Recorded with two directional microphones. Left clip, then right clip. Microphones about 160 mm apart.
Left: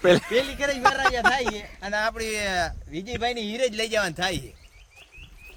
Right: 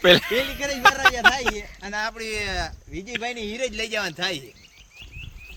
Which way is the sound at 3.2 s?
75° left (ahead or behind).